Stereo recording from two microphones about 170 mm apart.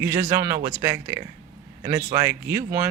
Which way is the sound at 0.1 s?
50° right (ahead or behind).